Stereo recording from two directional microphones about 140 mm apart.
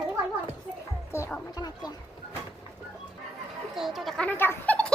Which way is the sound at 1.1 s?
20° left (ahead or behind).